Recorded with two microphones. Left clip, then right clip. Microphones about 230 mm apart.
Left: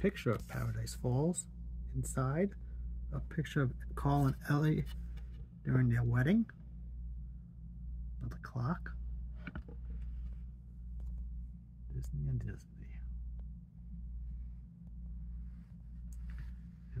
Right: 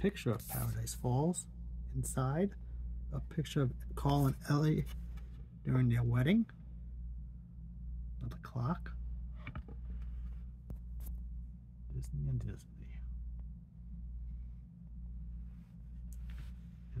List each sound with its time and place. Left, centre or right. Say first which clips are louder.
0.0 s speech: left 2 dB; centre
0.6 s speech: even; centre
8.4 s speech: even; centre
11.9 s a sound: even; centre